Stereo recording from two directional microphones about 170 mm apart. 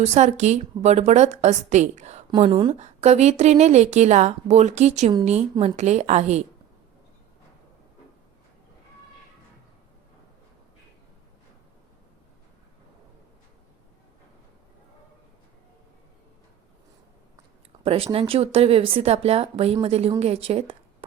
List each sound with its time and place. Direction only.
0.0 s a woman's voice: 40° right (ahead or behind)
17.8 s a woman's voice: 35° right (ahead or behind)